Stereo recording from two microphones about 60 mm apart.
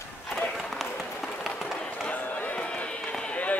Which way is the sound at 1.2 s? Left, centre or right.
Centre.